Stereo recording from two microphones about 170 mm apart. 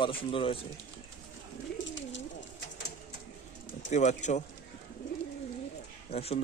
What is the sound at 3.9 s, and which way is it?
Speech, 45° left (ahead or behind).